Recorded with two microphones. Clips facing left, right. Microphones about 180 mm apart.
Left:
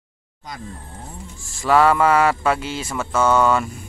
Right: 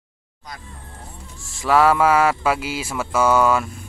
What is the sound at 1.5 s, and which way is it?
Speech, centre (ahead or behind).